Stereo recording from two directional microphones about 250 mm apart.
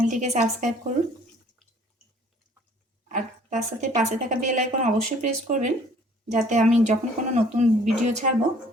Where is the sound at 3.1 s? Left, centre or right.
Right.